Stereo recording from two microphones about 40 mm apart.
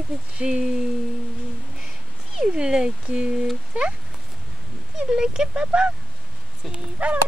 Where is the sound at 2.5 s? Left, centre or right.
Right.